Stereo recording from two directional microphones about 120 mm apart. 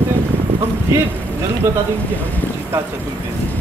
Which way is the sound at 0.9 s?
20° right (ahead or behind).